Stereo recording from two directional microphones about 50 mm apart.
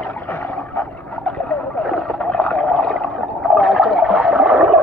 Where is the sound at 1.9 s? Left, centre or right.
Centre.